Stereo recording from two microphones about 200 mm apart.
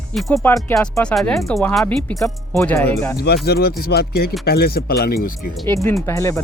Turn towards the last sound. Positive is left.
turn(degrees=15)  # may be behind; listen again after turning